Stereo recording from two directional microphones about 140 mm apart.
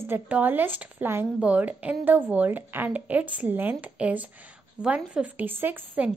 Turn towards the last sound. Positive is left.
turn(degrees=-10)  # may be behind; listen again after turning